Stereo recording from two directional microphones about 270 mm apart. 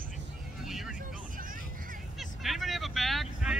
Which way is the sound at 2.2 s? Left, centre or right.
Centre.